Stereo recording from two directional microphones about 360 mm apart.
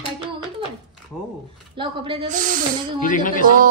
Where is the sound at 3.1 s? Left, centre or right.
Left.